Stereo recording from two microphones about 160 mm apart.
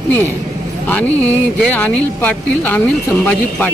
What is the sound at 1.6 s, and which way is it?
Speech, 10° left (ahead or behind).